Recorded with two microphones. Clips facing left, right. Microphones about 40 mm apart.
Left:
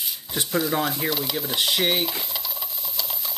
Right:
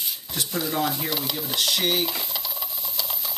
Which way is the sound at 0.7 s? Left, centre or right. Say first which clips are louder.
Left 1 dB; centre.